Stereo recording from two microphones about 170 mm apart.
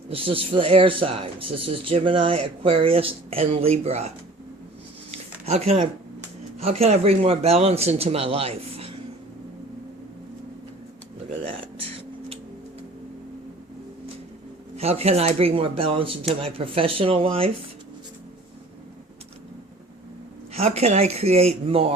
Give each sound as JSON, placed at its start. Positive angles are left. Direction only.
{"t": 0.1, "sound": "speech", "side_deg": -35}
{"t": 5.1, "sound": "a sound", "side_deg": -40}
{"t": 6.6, "sound": "speech", "side_deg": -35}
{"t": 14.8, "sound": "speech", "side_deg": -35}
{"t": 20.5, "sound": "speech", "side_deg": -35}